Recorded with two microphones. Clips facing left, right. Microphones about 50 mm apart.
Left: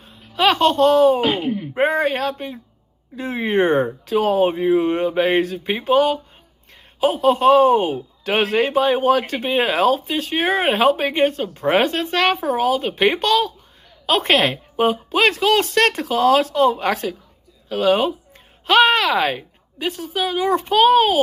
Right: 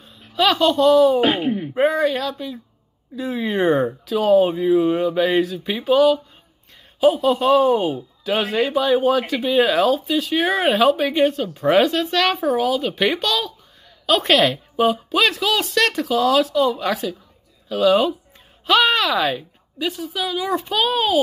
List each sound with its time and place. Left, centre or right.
0.0 s a sound: left
1.2 s speech: right
1.8 s a woman's voice: left
7.0 s a man's voice: left
8.5 s a woman's voice: left
17.6 s a woman's voice: left